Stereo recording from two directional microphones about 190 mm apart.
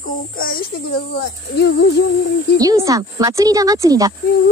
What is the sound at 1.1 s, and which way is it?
Speech, 60° left (ahead or behind).